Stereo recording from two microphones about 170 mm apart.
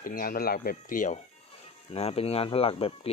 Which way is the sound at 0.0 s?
55° left (ahead or behind).